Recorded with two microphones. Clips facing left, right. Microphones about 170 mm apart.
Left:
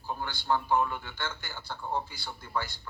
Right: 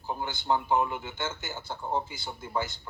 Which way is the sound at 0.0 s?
20° right (ahead or behind).